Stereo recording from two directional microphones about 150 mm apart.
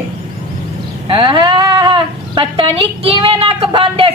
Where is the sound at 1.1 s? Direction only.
35° right (ahead or behind).